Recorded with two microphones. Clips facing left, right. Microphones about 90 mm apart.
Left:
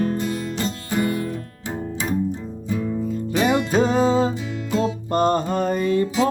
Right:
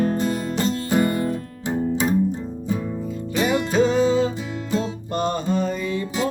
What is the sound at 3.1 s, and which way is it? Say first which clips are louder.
Music: left 1 dB; 40° left (ahead or behind).